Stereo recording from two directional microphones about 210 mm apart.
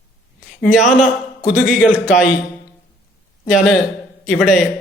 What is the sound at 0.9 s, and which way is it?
A man's voice, 35° left (ahead or behind).